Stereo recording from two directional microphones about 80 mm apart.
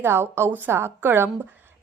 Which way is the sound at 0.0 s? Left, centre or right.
Right.